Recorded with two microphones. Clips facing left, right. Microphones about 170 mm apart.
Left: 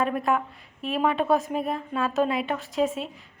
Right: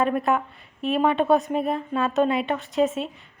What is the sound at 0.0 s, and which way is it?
A woman's voice, centre (ahead or behind).